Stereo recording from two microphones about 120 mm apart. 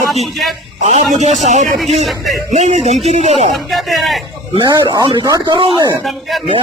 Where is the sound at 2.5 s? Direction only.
75° right (ahead or behind).